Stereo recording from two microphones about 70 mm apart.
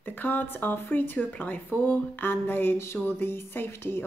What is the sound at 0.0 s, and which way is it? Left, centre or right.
Speech, left.